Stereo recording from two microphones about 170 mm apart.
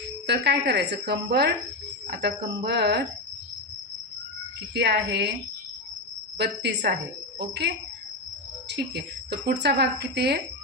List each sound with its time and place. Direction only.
0.3 s speech: 85° right
2.6 s speech: 80° right
4.7 s speech: 75° right (ahead or behind)
6.3 s speech: 85° right
8.7 s speech: 80° right